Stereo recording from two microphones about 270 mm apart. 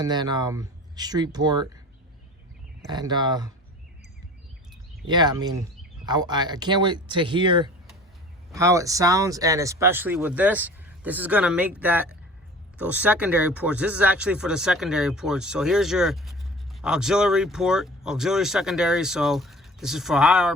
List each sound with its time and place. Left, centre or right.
0.0 s speech: centre
2.9 s speech: centre
5.0 s speech: centre